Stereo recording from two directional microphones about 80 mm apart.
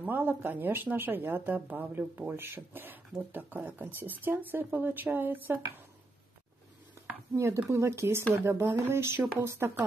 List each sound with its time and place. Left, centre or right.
0.0 s speech: right
7.3 s speech: right